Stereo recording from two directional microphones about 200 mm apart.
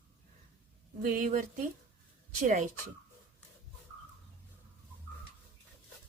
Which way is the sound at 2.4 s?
35° right (ahead or behind).